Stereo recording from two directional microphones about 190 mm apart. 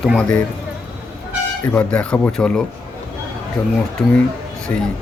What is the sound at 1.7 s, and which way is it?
Speech, 5° left (ahead or behind).